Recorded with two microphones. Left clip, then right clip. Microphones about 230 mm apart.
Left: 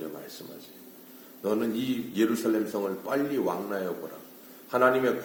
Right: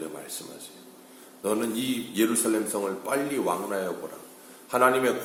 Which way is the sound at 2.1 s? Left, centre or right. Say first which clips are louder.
Right 1 dB; centre.